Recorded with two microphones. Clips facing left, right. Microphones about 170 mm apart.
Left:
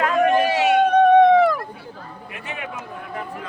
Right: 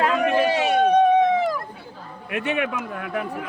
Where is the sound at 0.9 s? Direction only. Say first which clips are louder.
Left 4 dB; 60° left (ahead or behind).